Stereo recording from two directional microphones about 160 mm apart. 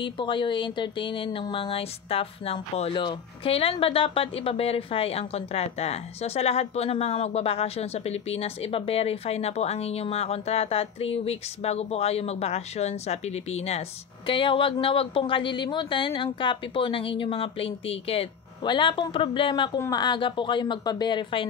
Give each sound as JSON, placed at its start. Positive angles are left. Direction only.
{"t": 0.0, "sound": "a woman's voice", "side_deg": 30}